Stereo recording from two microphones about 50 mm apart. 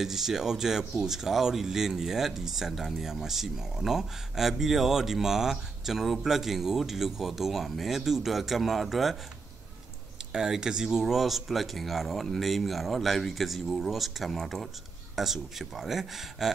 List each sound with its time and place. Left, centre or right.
0.0 s speech: centre
10.3 s speech: centre